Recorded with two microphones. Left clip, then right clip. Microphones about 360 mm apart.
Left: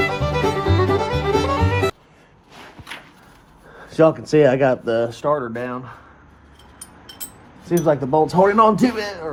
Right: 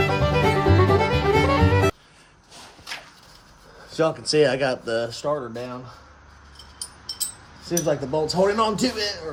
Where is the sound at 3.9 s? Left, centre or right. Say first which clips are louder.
Left 6 dB; left.